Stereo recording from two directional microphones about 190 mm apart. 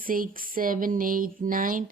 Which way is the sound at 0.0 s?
45° right (ahead or behind).